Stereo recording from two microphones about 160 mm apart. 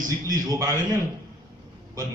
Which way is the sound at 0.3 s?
25° right (ahead or behind).